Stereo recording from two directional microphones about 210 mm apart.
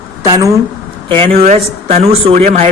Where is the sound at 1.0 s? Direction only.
25° right (ahead or behind).